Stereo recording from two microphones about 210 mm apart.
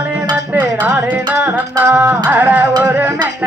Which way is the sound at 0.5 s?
5° right (ahead or behind).